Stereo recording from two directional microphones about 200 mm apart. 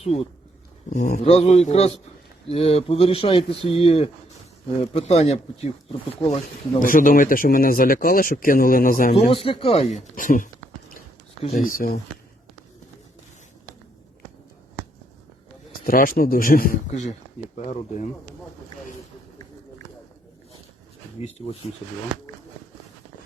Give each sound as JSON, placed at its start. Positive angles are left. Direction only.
{"t": 0.9, "sound": "speech", "side_deg": 40}
{"t": 1.2, "sound": "speech", "side_deg": 30}
{"t": 6.8, "sound": "speech", "side_deg": 45}
{"t": 9.1, "sound": "speech", "side_deg": 30}
{"t": 15.9, "sound": "speech", "side_deg": 45}
{"t": 21.2, "sound": "speech", "side_deg": 30}